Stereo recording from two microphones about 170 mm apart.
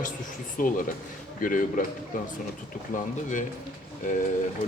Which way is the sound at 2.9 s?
50° left (ahead or behind).